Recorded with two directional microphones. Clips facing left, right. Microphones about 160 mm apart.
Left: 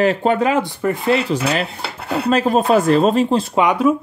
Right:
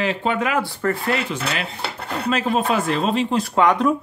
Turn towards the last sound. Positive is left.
turn(degrees=10)  # may be behind; listen again after turning